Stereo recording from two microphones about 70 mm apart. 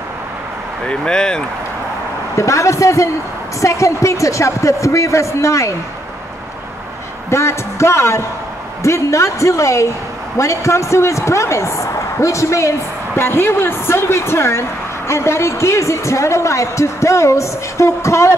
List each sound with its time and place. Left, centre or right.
0.8 s speech: centre
2.3 s a woman's voice: left
7.2 s a woman's voice: left